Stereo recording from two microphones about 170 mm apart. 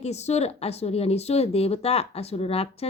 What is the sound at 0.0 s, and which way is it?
Speech, 40° left (ahead or behind).